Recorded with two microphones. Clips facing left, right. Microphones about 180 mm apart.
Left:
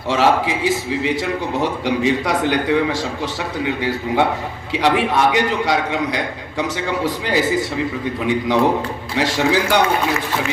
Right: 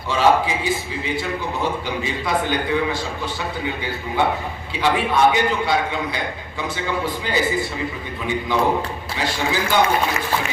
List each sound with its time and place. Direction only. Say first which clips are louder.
0.1 s a man's voice: left 1 dB; 80° left
4.7 s a man's voice: left 3 dB; 75° left (ahead or behind)